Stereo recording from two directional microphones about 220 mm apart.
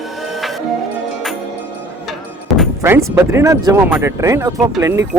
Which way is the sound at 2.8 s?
10° right (ahead or behind).